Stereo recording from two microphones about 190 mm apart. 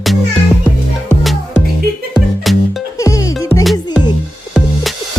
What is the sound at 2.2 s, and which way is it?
Music, centre (ahead or behind).